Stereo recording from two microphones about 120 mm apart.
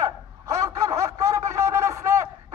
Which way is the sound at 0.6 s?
30° right (ahead or behind).